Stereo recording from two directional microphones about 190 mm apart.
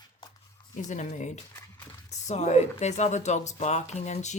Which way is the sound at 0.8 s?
40° left (ahead or behind).